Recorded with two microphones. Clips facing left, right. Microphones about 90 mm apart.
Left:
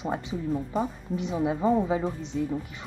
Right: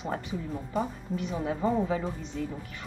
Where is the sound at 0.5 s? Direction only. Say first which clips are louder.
Left 3 dB; 5° left (ahead or behind).